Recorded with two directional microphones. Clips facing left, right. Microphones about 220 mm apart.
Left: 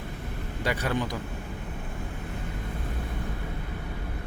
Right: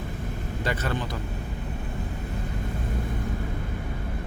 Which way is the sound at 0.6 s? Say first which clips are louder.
Left 1 dB; 10° left (ahead or behind).